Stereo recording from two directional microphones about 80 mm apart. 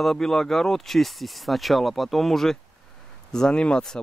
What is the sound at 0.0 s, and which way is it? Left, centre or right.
Speech, centre.